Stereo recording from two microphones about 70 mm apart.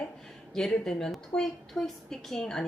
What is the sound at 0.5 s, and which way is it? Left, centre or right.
A woman's voice, centre.